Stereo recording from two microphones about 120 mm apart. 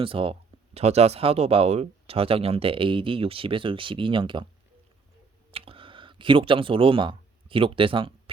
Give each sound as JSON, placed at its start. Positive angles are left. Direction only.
{"t": 0.0, "sound": "speech", "side_deg": -50}
{"t": 5.5, "sound": "speech", "side_deg": -50}